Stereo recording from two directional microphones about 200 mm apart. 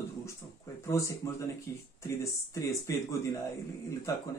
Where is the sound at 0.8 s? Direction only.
15° left (ahead or behind).